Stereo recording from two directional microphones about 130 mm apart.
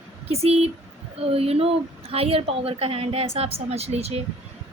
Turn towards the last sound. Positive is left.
turn(degrees=-55)  # may be behind; listen again after turning